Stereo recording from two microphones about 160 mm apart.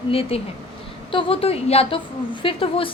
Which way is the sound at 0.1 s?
35° left (ahead or behind).